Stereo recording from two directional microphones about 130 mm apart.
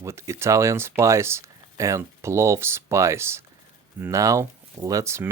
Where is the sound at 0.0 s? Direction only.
20° right (ahead or behind).